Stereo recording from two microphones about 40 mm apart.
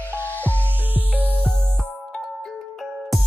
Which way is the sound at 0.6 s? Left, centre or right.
Right.